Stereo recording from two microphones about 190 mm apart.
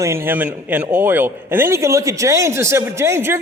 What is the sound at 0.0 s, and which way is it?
A man's voice, 15° right (ahead or behind).